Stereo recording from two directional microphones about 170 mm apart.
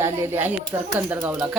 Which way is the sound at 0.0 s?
15° right (ahead or behind).